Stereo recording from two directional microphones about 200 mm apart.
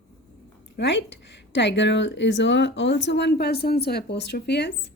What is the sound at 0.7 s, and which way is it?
A woman's voice, 60° left (ahead or behind).